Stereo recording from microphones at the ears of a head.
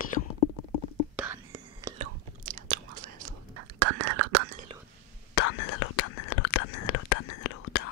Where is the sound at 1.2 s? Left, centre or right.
Right.